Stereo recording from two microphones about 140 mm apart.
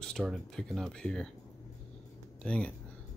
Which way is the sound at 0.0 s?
5° left (ahead or behind).